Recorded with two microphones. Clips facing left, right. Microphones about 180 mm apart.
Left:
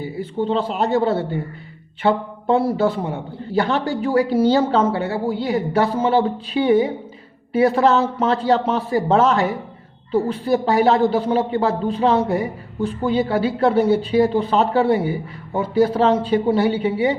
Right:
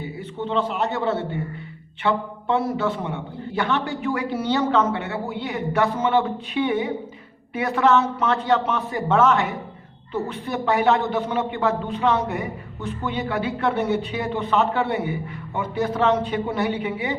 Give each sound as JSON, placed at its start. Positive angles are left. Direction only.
{"t": 0.0, "sound": "a man's voice", "side_deg": 35}